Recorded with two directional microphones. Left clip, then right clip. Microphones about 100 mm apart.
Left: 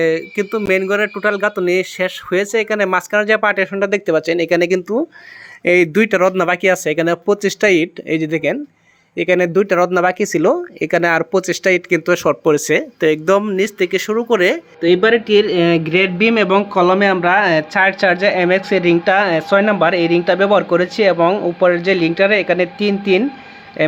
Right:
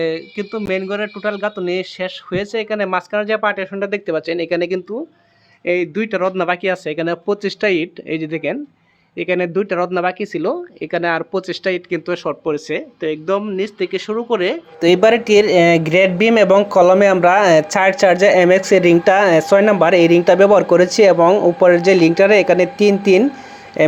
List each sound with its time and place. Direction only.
0.0 s speech: 25° left (ahead or behind)
0.9 s speech: 40° left (ahead or behind)
5.6 s speech: 90° left
6.1 s speech: 40° left (ahead or behind)
10.9 s speech: 40° left (ahead or behind)
12.3 s speech: 55° left (ahead or behind)
13.4 s speech: 25° left (ahead or behind)
14.8 s a man's voice: 45° right (ahead or behind); by 21.2 s 30° right (ahead or behind)
21.2 s a man's voice: 15° right (ahead or behind)